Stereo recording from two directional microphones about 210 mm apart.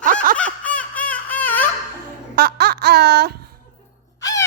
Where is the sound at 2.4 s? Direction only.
50° right (ahead or behind).